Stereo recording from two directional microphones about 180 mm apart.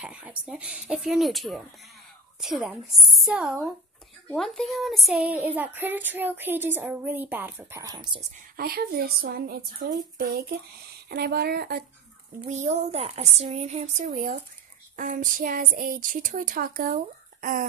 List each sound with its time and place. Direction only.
0.0 s speech: 5° right (ahead or behind); by 8.2 s 20° right (ahead or behind)
8.5 s a woman's voice: 55° right (ahead or behind)
12.4 s speech: 40° right (ahead or behind)